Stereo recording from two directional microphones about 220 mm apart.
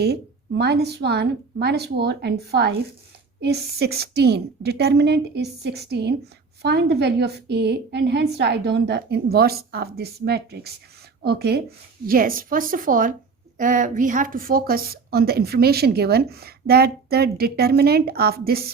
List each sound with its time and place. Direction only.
0.0 s a woman's voice: 50° right (ahead or behind)